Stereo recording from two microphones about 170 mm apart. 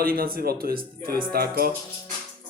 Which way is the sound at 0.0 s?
60° right (ahead or behind).